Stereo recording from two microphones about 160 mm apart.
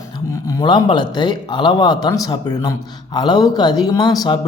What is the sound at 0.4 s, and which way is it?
Speech, 30° left (ahead or behind).